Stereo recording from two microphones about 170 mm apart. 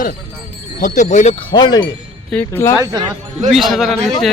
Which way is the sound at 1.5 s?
25° left (ahead or behind).